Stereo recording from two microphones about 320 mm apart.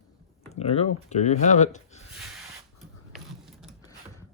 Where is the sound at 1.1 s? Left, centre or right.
Left.